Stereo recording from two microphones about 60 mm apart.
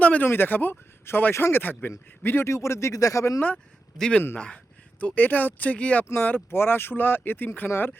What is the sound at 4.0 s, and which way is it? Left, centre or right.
Speech, centre.